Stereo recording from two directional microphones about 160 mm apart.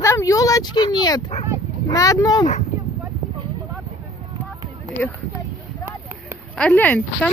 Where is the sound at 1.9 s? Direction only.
20° left (ahead or behind).